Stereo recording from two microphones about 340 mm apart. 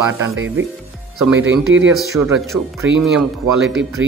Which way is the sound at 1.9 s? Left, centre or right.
Centre.